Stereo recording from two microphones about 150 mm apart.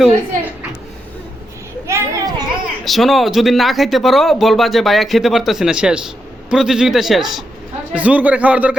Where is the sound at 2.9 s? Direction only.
Centre (ahead or behind).